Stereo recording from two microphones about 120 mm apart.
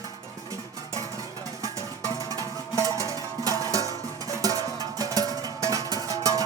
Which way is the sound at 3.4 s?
30° right (ahead or behind).